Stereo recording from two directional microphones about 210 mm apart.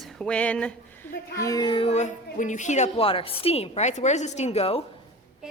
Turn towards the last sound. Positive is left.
turn(degrees=30)  # may be behind; listen again after turning